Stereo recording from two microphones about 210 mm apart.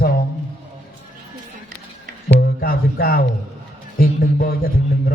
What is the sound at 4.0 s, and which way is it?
Speech, 45° left (ahead or behind).